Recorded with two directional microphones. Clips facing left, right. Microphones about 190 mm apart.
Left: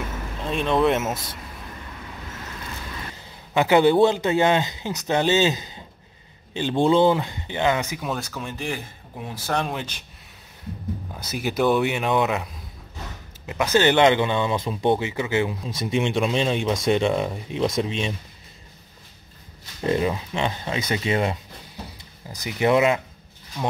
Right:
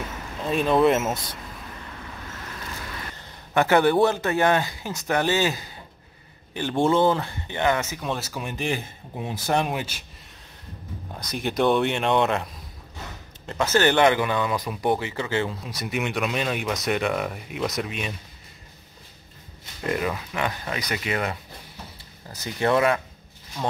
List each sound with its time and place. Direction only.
0.4 s speech: centre (ahead or behind)
3.2 s speech: 15° left (ahead or behind)
8.3 s speech: 15° right (ahead or behind)
11.1 s speech: 5° left (ahead or behind)
13.5 s speech: 15° left (ahead or behind)
19.9 s speech: 25° left (ahead or behind)
22.3 s speech: 15° left (ahead or behind)